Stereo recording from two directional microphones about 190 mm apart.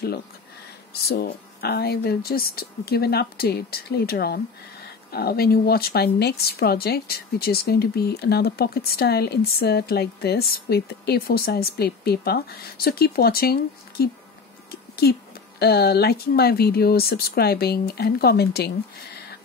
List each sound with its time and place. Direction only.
1.0 s a woman's voice: 55° left (ahead or behind)
14.7 s a sound: 55° left (ahead or behind)
15.6 s a woman's voice: 55° left (ahead or behind)